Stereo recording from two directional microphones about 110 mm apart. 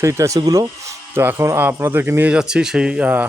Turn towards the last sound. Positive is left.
turn(degrees=-10)  # may be behind; listen again after turning